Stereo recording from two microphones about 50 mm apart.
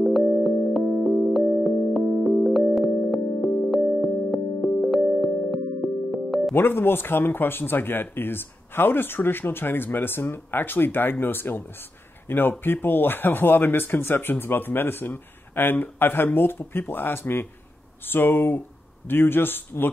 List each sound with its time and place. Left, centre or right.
0.0 s music: centre
6.5 s speech: left